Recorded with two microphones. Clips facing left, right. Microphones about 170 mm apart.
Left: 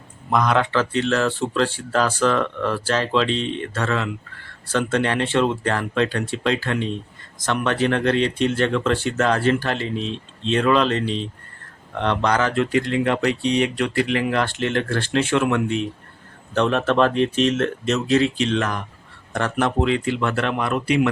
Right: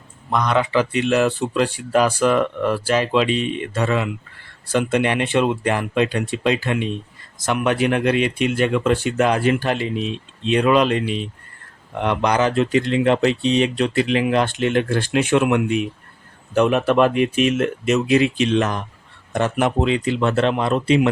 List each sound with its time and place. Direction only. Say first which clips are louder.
0.3 s speech: even; centre (ahead or behind)
0.7 s speech: right 2 dB; 15° right (ahead or behind)